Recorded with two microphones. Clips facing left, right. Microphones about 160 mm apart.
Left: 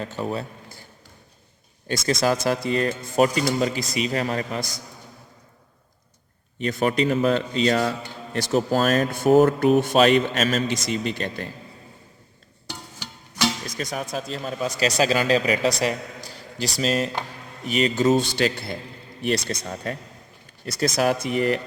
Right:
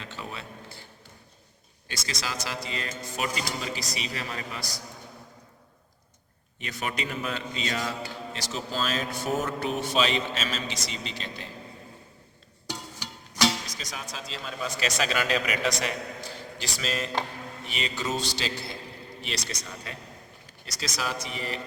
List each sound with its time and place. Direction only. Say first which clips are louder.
0.0 s a man's voice: left 11 dB; 45° left (ahead or behind)
1.9 s a man's voice: left 14 dB; 50° left (ahead or behind)
6.6 s a man's voice: left 11 dB; 45° left (ahead or behind)
13.7 s a man's voice: left 10 dB; 55° left (ahead or behind)